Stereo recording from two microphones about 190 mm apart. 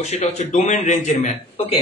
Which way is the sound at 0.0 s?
35° left (ahead or behind).